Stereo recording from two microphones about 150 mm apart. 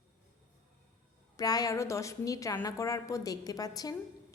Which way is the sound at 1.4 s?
25° left (ahead or behind).